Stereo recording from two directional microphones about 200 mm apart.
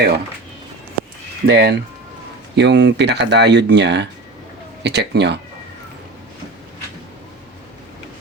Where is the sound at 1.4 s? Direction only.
55° right (ahead or behind).